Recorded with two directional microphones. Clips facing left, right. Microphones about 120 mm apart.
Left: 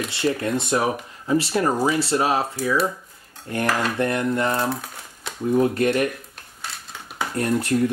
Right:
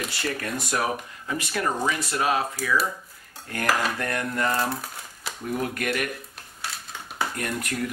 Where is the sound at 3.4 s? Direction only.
25° left (ahead or behind).